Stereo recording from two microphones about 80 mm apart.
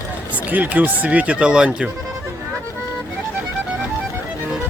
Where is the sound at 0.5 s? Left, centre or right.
Right.